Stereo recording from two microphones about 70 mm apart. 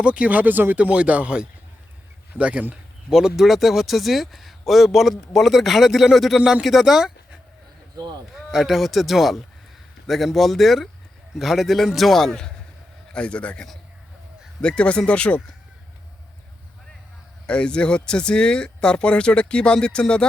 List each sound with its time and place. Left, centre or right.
0.0 s speech: centre
0.8 s speech: centre
3.1 s speech: centre
13.1 s speech: centre
17.4 s speech: centre